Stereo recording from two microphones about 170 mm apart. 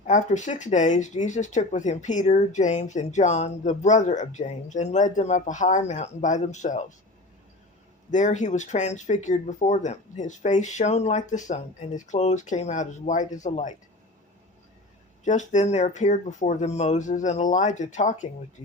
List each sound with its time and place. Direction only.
0.0 s speech: 45° left (ahead or behind)
8.1 s speech: 45° left (ahead or behind)
15.2 s speech: 45° left (ahead or behind)